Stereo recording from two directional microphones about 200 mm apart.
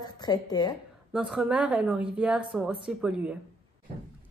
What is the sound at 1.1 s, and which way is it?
A woman's voice, 5° right (ahead or behind).